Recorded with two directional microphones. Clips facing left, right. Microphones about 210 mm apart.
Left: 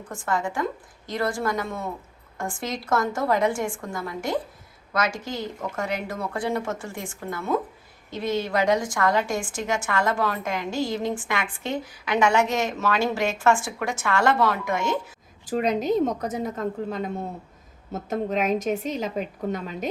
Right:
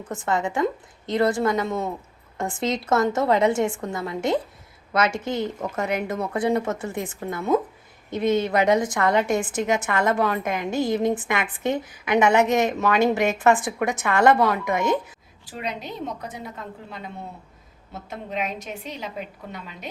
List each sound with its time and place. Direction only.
0.1 s a woman's voice: 20° right (ahead or behind)
10.7 s a woman's voice: 55° right (ahead or behind)
10.9 s a woman's voice: 20° right (ahead or behind)
15.4 s a woman's voice: 45° left (ahead or behind)